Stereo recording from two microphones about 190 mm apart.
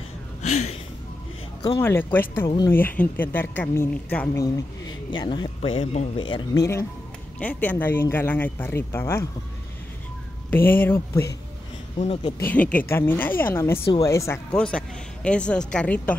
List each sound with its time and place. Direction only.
0.4 s speech: 40° left (ahead or behind)
1.6 s speech: 10° left (ahead or behind)
10.5 s speech: 10° left (ahead or behind)
12.0 s speech: 30° left (ahead or behind)
12.4 s a woman's voice: 5° left (ahead or behind)